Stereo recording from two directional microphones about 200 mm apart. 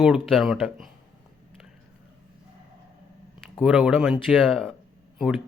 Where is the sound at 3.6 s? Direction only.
5° right (ahead or behind).